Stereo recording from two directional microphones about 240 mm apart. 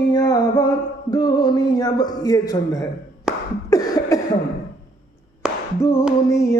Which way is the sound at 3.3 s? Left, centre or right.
Centre.